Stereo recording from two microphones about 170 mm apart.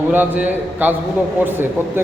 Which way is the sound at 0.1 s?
10° right (ahead or behind).